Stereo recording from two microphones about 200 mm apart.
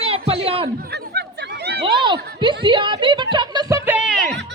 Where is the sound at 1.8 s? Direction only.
25° right (ahead or behind).